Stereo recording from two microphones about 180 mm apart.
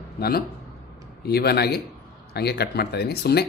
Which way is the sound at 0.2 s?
60° left (ahead or behind).